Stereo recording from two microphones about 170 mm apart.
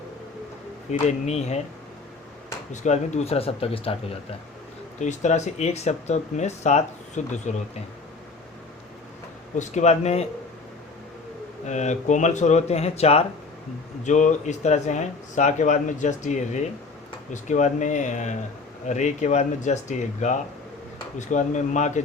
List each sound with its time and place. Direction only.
0.9 s speech: 40° left (ahead or behind)
2.8 s speech: 45° left (ahead or behind)
4.9 s speech: 45° left (ahead or behind)
9.6 s speech: 40° left (ahead or behind)
11.6 s speech: 45° left (ahead or behind)